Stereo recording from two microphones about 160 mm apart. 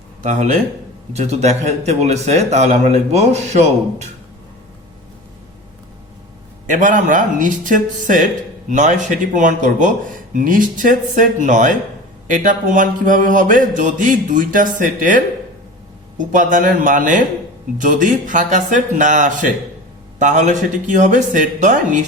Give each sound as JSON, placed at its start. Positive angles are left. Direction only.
{"t": 0.2, "sound": "a man's voice", "side_deg": -50}
{"t": 6.7, "sound": "a man's voice", "side_deg": -55}
{"t": 12.3, "sound": "mantra", "side_deg": -55}
{"t": 17.7, "sound": "a man's voice", "side_deg": -55}